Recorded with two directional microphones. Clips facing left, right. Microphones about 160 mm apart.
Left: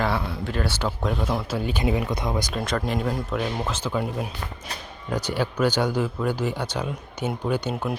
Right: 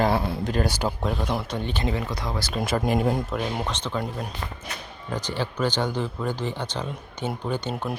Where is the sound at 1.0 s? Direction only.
Centre (ahead or behind); by 2.5 s 20° left (ahead or behind).